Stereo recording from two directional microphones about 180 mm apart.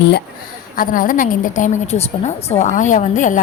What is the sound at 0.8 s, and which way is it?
A woman's voice, 50° left (ahead or behind).